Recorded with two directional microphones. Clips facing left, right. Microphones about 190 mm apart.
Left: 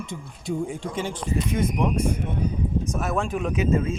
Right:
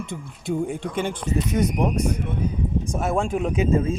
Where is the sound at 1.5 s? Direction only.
40° right (ahead or behind).